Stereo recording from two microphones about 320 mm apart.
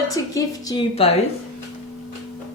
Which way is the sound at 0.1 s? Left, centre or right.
Centre.